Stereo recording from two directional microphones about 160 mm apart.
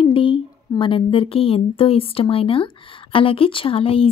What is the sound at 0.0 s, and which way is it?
Speech, 35° left (ahead or behind).